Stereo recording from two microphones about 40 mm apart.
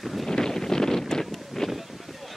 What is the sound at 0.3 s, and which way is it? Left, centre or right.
Wind noise, centre.